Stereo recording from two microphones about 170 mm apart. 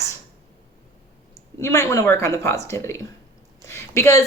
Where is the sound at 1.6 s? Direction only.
15° left (ahead or behind).